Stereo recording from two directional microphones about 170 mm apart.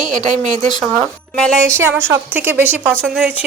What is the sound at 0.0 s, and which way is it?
Speech, 45° right (ahead or behind).